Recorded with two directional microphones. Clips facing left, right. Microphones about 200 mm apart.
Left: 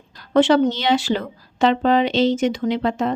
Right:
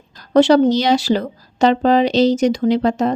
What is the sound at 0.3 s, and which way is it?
Speech, 40° right (ahead or behind).